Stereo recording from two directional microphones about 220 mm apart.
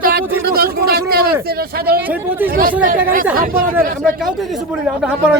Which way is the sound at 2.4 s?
40° right (ahead or behind).